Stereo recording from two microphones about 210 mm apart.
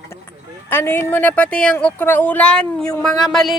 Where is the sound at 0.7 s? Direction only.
10° left (ahead or behind).